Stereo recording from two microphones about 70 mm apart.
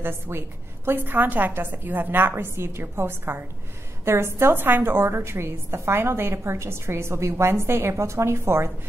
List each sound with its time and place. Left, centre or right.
0.0 s a woman's voice: right